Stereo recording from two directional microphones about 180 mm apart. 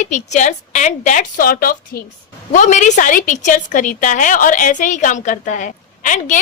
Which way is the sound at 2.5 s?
40° left (ahead or behind).